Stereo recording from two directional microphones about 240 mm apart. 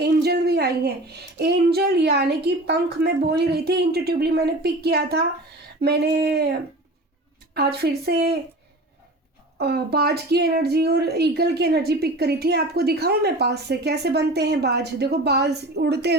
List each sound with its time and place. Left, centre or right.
0.0 s a woman's voice: right
7.5 s a woman's voice: right
9.6 s speech: right